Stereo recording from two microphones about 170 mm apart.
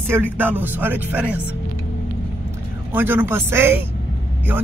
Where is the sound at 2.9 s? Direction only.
10° right (ahead or behind).